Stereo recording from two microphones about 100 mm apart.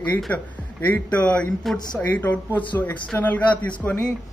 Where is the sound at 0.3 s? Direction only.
15° left (ahead or behind).